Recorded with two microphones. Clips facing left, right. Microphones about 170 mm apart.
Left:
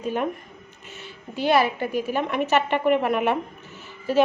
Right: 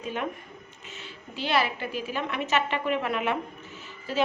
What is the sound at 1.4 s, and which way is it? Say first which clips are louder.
A woman's voice: left 6 dB; 50° left (ahead or behind).